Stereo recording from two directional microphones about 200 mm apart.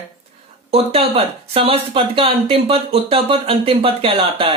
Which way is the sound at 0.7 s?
30° right (ahead or behind).